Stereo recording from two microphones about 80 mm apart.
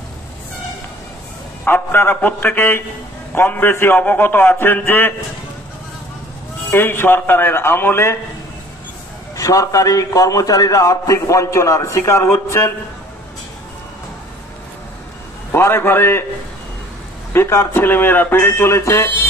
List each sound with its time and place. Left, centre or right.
1.6 s a man's voice: left
6.7 s a man's voice: left
9.4 s a man's voice: left
15.5 s a man's voice: left
17.3 s a man's voice: left